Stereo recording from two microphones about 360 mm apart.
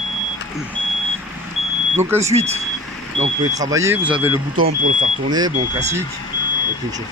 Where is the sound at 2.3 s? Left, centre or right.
Centre.